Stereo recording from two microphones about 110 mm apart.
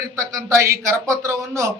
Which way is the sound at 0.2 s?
25° right (ahead or behind).